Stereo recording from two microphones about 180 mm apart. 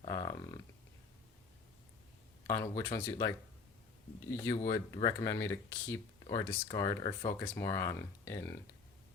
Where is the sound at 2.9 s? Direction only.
20° left (ahead or behind).